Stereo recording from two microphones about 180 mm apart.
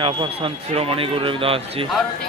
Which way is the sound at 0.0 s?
30° right (ahead or behind).